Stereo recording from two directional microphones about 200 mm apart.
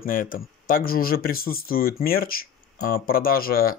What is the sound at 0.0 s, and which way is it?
Speech, 45° left (ahead or behind).